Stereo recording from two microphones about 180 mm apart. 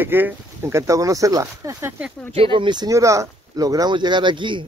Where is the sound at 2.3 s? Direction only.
30° right (ahead or behind).